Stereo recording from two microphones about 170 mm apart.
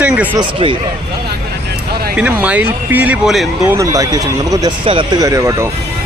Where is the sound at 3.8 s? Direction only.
20° right (ahead or behind).